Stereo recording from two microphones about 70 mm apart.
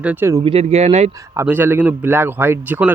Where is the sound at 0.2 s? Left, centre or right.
Right.